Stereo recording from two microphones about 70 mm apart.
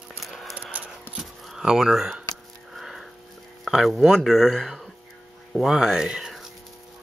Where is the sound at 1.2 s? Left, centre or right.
Centre.